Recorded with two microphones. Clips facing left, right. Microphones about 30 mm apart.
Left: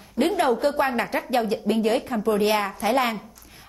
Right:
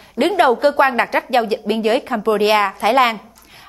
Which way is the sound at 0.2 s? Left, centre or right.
Right.